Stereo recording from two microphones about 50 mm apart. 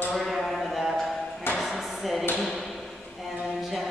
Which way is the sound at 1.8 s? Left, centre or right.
Centre.